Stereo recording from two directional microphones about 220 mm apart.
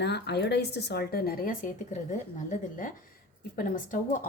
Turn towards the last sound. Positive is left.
turn(degrees=35)  # may be behind; listen again after turning